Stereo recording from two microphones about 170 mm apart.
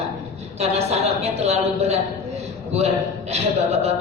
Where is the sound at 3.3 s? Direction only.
40° right (ahead or behind).